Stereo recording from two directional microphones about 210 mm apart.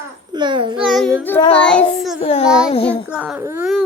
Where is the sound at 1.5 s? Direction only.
5° left (ahead or behind).